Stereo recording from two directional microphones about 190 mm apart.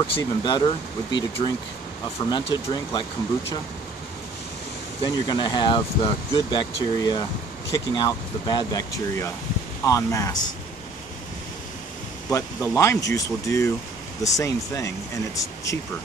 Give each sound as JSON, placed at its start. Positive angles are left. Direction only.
{"t": 0.2, "sound": "speech", "side_deg": 25}
{"t": 5.0, "sound": "speech", "side_deg": 25}
{"t": 12.3, "sound": "speech", "side_deg": 15}